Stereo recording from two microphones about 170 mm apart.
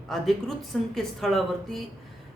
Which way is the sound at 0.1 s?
Centre (ahead or behind).